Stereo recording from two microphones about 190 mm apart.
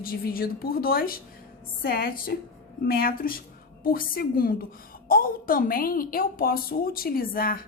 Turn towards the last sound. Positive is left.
turn(degrees=50)  # may be behind; listen again after turning